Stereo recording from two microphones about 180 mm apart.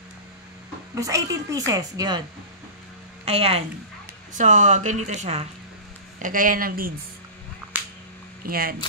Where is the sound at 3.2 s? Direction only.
35° right (ahead or behind).